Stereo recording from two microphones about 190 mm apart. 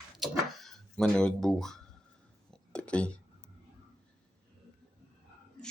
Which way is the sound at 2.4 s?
5° left (ahead or behind).